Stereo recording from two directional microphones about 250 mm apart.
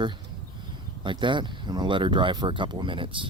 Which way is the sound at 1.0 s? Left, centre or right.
Centre.